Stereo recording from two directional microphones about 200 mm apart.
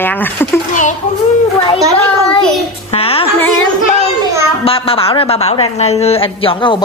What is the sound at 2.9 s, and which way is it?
Speech, 30° left (ahead or behind).